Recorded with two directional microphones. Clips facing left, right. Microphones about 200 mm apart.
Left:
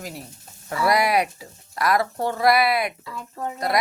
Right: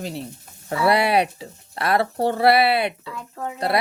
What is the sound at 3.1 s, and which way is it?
Speech, centre (ahead or behind).